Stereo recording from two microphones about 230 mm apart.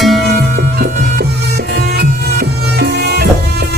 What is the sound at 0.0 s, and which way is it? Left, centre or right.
Music, centre.